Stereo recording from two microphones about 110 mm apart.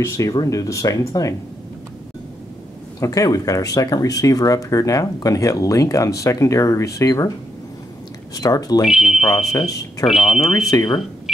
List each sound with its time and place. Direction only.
0.0 s speech: 30° left (ahead or behind)
3.0 s speech: 30° left (ahead or behind)
8.4 s speech: 35° left (ahead or behind)
8.8 s speech: 5° right (ahead or behind)
9.5 s speech: 30° left (ahead or behind)
10.0 s speech: centre (ahead or behind)
10.9 s cash register: centre (ahead or behind)